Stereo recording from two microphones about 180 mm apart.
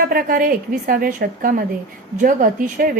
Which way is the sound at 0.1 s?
55° right (ahead or behind).